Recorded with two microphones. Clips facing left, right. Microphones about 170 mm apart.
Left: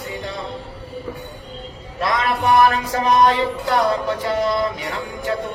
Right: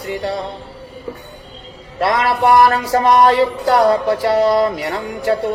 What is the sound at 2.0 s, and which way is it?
Music, 35° right (ahead or behind).